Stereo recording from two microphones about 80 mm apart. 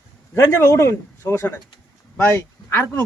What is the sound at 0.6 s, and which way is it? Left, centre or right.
Speech, left.